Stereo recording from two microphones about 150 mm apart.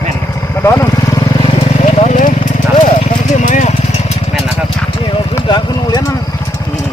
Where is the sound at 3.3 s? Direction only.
55° left (ahead or behind).